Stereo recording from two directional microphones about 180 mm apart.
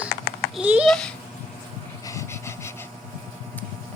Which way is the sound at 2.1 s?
15° left (ahead or behind).